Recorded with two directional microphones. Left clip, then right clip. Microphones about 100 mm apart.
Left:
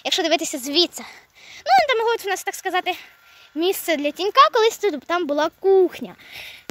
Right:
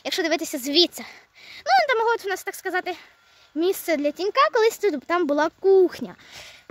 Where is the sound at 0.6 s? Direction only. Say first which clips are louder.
Even; 35° right (ahead or behind).